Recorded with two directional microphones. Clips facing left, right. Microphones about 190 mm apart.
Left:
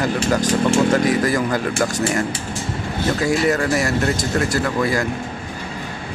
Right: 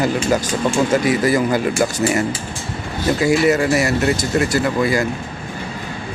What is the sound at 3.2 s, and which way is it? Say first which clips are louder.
Speech: right 4 dB; 5° right (ahead or behind).